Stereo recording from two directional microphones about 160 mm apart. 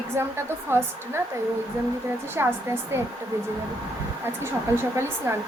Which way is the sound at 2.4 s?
20° right (ahead or behind).